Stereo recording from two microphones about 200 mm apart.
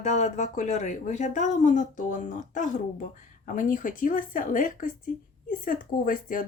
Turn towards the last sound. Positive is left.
turn(degrees=45)  # may be behind; listen again after turning